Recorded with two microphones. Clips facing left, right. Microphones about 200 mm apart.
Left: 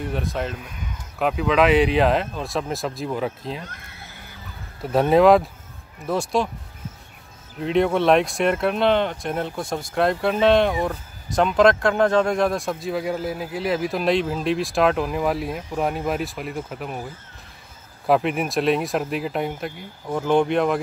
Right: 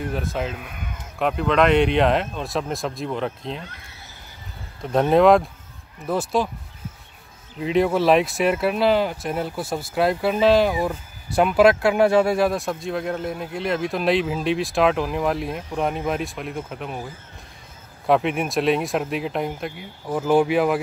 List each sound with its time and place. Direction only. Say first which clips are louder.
0.0 s speech: even; centre (ahead or behind)
0.6 s speech: right 1 dB; 60° right (ahead or behind)
1.2 s speech: even; 5° left (ahead or behind)
3.6 s neigh: left 1 dB; 55° left (ahead or behind)
4.8 s speech: even; centre (ahead or behind)
7.5 s speech: even; centre (ahead or behind)
18.0 s speech: even; centre (ahead or behind)